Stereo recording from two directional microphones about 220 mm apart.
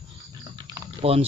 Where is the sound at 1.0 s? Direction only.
25° right (ahead or behind).